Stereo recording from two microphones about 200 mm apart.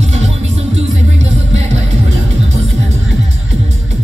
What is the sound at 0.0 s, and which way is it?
Music, 35° right (ahead or behind).